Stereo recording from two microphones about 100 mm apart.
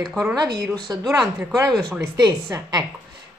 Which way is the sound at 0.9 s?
35° right (ahead or behind).